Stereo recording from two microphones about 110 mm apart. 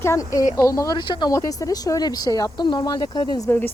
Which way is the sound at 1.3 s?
30° left (ahead or behind).